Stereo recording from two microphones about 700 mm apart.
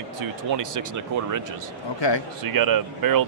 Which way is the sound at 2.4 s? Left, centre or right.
Right.